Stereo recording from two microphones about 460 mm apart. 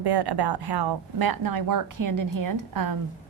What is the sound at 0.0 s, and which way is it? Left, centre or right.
A woman's voice, right.